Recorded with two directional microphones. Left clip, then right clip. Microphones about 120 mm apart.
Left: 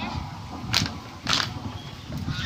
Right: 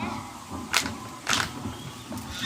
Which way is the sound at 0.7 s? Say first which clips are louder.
Left 1 dB; 20° right (ahead or behind).